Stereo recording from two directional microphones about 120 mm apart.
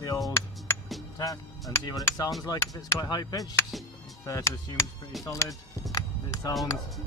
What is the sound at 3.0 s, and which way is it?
Speech, 35° left (ahead or behind).